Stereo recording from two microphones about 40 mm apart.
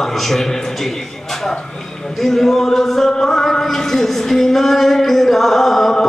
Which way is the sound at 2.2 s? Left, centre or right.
Centre.